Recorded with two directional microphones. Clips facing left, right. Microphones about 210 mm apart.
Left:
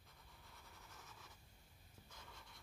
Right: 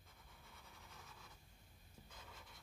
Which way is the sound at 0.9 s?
Centre (ahead or behind).